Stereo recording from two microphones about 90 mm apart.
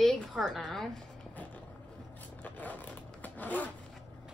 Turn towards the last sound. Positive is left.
turn(degrees=20)  # may be behind; listen again after turning